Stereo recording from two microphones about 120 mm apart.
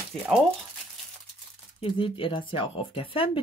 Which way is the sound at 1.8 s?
45° left (ahead or behind).